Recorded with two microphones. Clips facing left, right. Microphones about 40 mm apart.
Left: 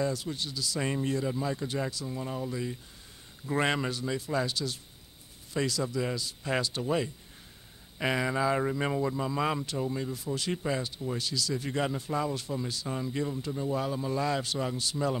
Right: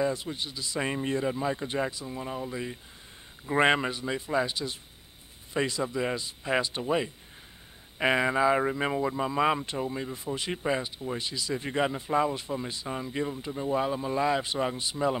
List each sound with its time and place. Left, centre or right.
0.0 s speech: right